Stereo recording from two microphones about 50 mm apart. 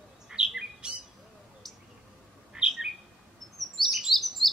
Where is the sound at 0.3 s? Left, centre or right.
Centre.